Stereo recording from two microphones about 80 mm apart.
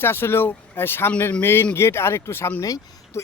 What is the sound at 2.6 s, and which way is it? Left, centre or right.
Speech, left.